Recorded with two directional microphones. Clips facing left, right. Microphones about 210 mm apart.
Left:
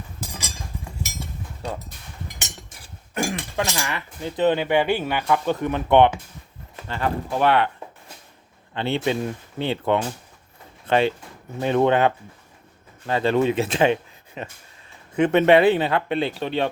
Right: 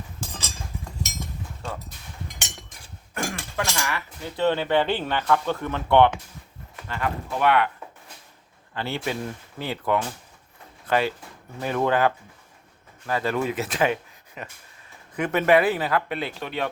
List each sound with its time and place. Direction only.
0.3 s a sound: 10° left (ahead or behind)
2.2 s cutlery: 5° left (ahead or behind)
3.2 s speech: 25° left (ahead or behind)
6.8 s speech: 30° left (ahead or behind)
8.7 s speech: 25° left (ahead or behind)